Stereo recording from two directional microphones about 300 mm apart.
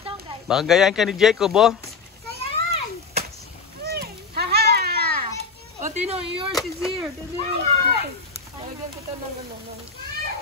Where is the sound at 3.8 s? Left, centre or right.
Right.